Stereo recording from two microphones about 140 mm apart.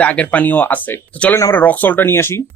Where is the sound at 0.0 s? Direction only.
10° left (ahead or behind).